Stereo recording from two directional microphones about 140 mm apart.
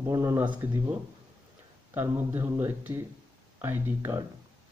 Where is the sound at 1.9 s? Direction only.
15° right (ahead or behind).